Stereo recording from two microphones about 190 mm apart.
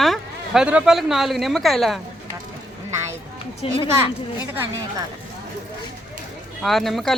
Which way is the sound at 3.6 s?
30° left (ahead or behind).